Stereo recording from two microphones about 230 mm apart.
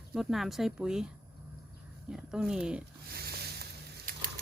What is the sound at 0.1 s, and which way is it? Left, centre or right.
Speech, centre.